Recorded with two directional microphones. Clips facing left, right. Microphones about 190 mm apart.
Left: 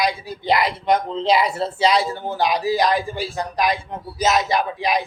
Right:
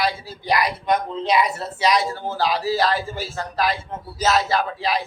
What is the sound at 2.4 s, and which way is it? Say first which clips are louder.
A man's voice: left 2 dB; 20° left (ahead or behind).